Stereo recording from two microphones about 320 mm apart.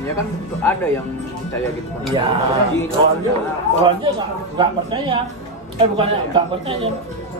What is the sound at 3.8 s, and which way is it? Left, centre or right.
Speech, centre.